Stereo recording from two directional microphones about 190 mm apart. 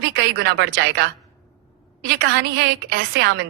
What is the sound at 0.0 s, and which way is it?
A woman's voice, 60° right (ahead or behind).